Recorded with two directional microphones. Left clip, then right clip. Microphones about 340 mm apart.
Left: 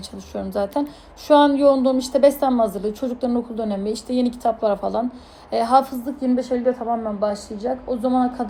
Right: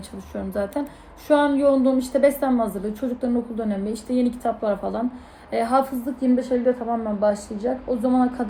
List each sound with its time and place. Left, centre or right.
0.3 s a woman's voice: centre